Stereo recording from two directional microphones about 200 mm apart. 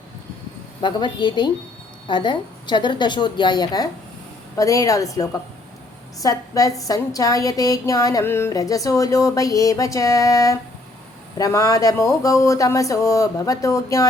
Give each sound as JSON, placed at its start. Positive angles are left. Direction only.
{"t": 0.8, "sound": "a woman's voice", "side_deg": 25}